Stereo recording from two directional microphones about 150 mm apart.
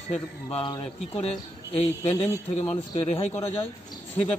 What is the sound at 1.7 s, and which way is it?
A man's voice, 40° left (ahead or behind).